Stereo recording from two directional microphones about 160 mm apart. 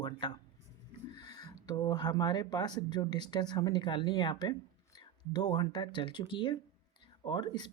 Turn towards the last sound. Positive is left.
turn(degrees=25)  # may be behind; listen again after turning